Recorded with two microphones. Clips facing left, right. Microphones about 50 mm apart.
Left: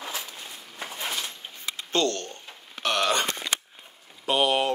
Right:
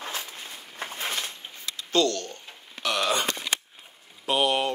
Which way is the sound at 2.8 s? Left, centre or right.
Left.